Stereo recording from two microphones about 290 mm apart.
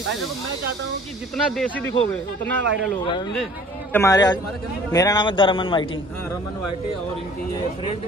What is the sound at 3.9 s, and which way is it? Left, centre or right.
A man's voice, centre.